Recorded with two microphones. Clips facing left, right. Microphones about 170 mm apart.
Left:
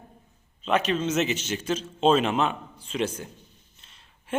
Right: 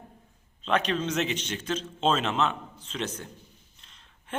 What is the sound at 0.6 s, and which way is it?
A man's voice, 5° left (ahead or behind).